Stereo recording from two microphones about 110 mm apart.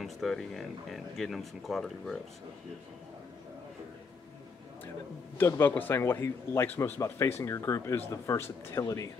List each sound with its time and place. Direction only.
0.0 s speech: centre (ahead or behind)
5.4 s a man's voice: 20° left (ahead or behind)